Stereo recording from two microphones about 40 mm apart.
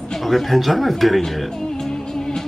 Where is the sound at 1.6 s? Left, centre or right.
Centre.